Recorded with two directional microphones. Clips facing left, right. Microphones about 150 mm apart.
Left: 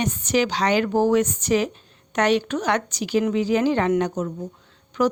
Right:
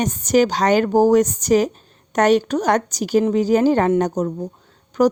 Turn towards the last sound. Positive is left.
turn(degrees=-40)  # may be behind; listen again after turning